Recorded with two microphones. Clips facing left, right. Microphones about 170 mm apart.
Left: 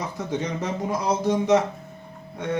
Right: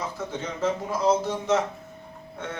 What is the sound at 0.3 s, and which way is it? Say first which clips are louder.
Speech: even; 15° left (ahead or behind).